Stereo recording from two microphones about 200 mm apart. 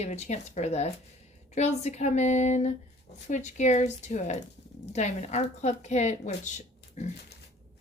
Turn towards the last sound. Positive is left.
turn(degrees=35)  # may be behind; listen again after turning